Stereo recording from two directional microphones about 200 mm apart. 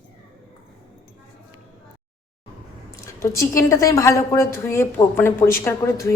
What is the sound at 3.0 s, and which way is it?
A woman's voice, 15° left (ahead or behind).